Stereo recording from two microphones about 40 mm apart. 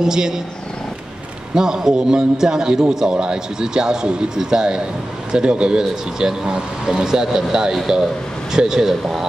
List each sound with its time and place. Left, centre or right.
0.0 s a man's voice: centre
1.5 s a man's voice: centre